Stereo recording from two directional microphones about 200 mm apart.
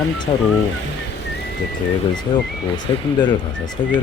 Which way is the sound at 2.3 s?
20° left (ahead or behind).